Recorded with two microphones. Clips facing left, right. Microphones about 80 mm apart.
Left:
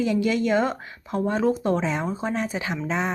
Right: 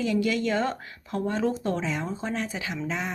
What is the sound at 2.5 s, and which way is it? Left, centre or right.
Speech, left.